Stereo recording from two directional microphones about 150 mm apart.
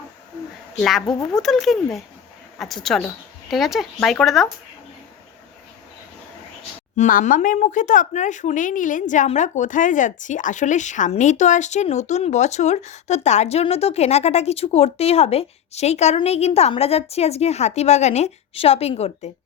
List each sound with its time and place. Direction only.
0.8 s speech: centre (ahead or behind)
6.9 s speech: 60° left (ahead or behind)